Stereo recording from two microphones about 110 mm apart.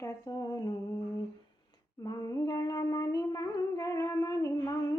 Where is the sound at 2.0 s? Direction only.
35° left (ahead or behind).